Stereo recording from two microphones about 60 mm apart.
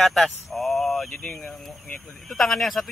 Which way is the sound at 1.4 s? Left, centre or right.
Centre.